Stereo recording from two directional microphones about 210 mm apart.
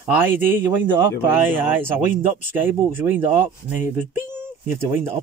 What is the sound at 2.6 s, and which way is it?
Speech, 10° right (ahead or behind).